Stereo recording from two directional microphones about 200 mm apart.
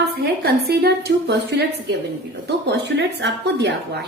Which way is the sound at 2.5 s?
55° right (ahead or behind).